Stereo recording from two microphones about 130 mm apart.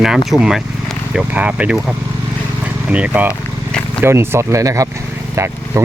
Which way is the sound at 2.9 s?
10° right (ahead or behind).